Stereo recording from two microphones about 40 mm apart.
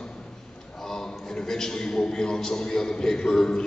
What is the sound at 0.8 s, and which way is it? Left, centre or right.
A man's voice, centre.